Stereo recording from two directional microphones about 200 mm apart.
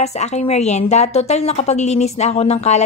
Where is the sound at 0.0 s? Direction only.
35° left (ahead or behind).